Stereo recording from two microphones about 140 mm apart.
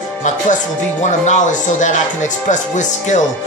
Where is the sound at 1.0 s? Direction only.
60° left (ahead or behind).